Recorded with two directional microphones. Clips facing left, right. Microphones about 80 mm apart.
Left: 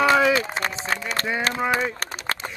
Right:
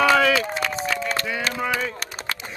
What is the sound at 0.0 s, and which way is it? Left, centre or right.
Run, left.